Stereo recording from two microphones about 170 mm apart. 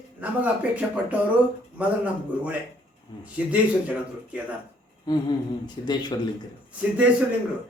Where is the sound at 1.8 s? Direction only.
10° right (ahead or behind).